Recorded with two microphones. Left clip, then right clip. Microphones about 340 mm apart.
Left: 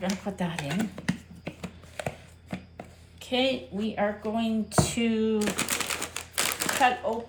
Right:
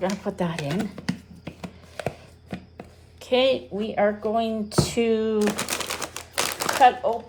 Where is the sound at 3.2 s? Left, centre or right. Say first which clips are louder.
Right 6 dB; right.